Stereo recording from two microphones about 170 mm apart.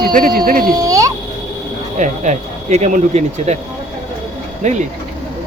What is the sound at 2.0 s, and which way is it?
Speech, 45° right (ahead or behind).